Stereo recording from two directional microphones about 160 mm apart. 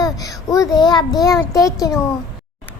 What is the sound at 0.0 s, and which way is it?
A child's voice, 20° left (ahead or behind).